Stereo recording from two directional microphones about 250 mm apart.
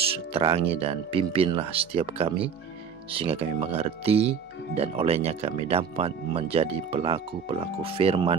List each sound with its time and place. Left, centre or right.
0.3 s speech: right